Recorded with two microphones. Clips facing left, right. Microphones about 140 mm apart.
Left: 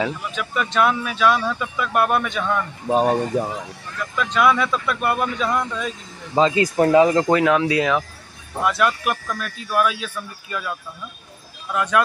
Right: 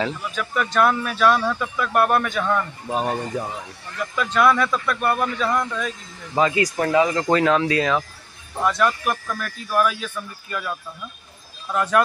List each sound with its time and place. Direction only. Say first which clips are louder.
0.7 s speech: even; 5° left (ahead or behind)
2.9 s speech: left 7 dB; 30° left (ahead or behind)
4.2 s speech: even; 5° right (ahead or behind)
6.3 s speech: left 3 dB; 25° left (ahead or behind)
7.2 s speech: left 1 dB; 10° left (ahead or behind)